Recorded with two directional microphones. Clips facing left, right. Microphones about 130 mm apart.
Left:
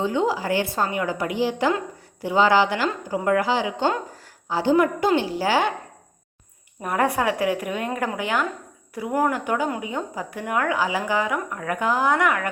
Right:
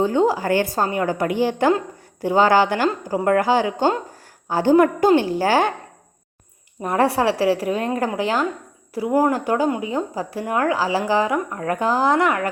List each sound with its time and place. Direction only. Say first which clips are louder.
0.0 s a woman's voice: right 4 dB; 45° right (ahead or behind)
6.8 s a woman's voice: right 4 dB; 30° right (ahead or behind)